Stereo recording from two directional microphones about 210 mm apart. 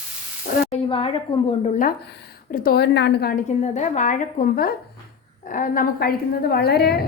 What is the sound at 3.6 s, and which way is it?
A woman's voice, 35° left (ahead or behind).